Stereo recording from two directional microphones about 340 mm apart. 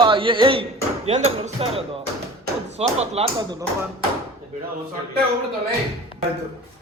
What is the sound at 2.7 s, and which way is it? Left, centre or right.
Speech, centre.